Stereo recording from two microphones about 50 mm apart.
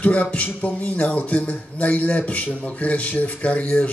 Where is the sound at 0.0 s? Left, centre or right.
Left.